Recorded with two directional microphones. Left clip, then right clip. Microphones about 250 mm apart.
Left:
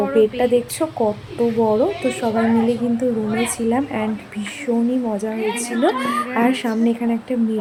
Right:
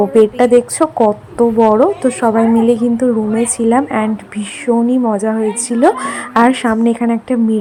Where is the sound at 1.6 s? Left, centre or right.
Centre.